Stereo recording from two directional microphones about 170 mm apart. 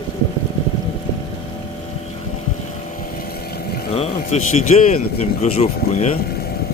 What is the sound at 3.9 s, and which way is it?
Speech, 40° left (ahead or behind).